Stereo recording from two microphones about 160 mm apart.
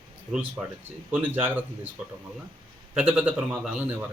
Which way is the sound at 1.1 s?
10° right (ahead or behind).